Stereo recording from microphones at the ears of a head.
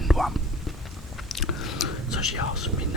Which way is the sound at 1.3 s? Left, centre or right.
Left.